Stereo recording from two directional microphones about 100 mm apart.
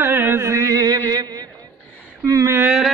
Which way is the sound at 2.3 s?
35° right (ahead or behind).